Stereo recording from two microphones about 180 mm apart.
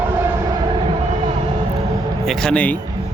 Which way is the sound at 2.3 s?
5° left (ahead or behind).